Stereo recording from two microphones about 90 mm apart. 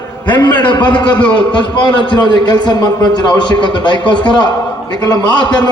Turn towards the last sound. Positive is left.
turn(degrees=55)  # may be behind; listen again after turning